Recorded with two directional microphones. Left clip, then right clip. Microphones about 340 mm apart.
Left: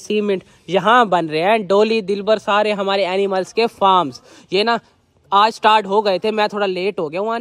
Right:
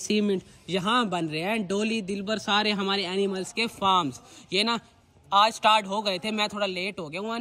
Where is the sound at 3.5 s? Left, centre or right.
Centre.